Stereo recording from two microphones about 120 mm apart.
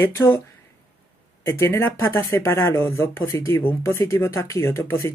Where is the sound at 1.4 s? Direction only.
20° left (ahead or behind).